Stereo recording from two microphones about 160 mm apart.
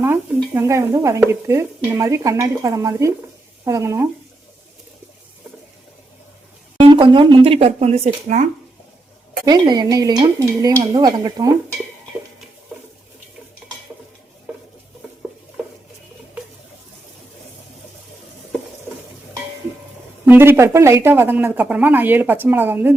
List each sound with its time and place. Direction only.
0.5 s speech: 20° right (ahead or behind)
6.8 s speech: 30° right (ahead or behind)
9.5 s speech: 25° right (ahead or behind)
20.2 s speech: 10° right (ahead or behind)